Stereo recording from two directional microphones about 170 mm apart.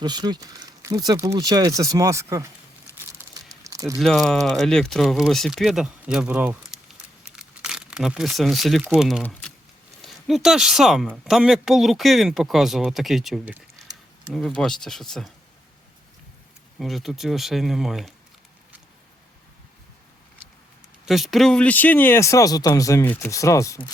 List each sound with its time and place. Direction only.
0.0 s speech: 25° right (ahead or behind)
3.3 s a sound: 20° right (ahead or behind)
3.9 s speech: centre (ahead or behind)
9.2 s a sound: 10° left (ahead or behind)
10.0 s speech: centre (ahead or behind)
16.7 s speech: centre (ahead or behind)
21.1 s speech: centre (ahead or behind); by 23.9 s 20° left (ahead or behind)